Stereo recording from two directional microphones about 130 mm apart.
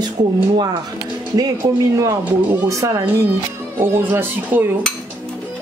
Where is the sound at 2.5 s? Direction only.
30° right (ahead or behind).